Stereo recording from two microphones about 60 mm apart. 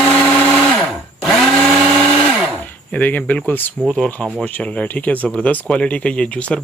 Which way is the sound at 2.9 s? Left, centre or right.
Left.